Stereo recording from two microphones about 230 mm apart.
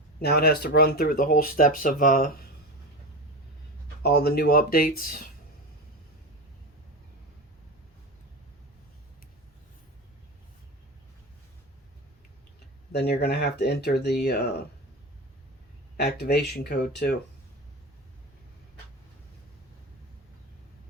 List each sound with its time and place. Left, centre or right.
0.2 s speech: left
4.0 s speech: left
12.9 s speech: left
16.0 s speech: left